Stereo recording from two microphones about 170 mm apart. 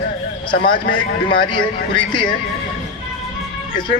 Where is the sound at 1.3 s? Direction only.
30° left (ahead or behind).